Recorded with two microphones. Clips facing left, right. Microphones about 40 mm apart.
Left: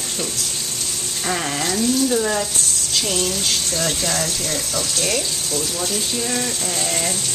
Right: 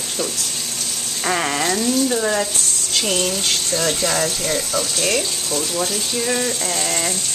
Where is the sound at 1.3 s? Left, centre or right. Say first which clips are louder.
Right 3 dB; centre.